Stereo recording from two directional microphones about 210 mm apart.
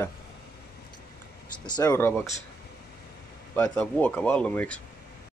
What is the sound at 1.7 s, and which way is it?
Speech, 15° left (ahead or behind).